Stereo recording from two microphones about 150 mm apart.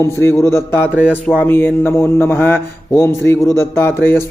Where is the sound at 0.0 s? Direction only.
20° left (ahead or behind).